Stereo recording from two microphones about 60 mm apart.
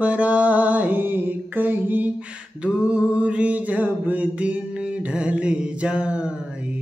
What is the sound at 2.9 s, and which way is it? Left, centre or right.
Music, centre.